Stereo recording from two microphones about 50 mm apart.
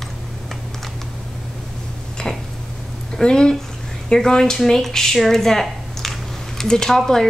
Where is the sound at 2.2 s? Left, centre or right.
Centre.